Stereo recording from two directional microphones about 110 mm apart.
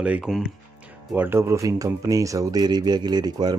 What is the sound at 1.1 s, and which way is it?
Speech, 20° right (ahead or behind).